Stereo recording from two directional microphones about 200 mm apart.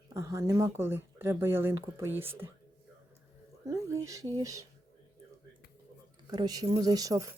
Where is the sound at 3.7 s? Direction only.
15° right (ahead or behind).